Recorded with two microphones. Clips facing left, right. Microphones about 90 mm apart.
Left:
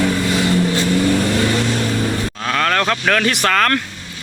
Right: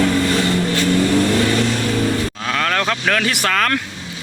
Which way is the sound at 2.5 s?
Centre (ahead or behind).